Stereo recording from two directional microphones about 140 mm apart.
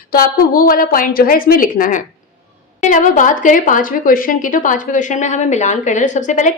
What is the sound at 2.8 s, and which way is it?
A woman's voice, 65° left (ahead or behind).